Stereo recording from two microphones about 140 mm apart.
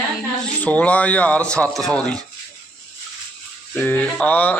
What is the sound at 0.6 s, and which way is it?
A man's voice, 10° left (ahead or behind).